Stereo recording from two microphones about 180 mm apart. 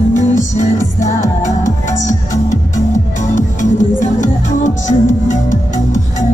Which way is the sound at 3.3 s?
45° left (ahead or behind).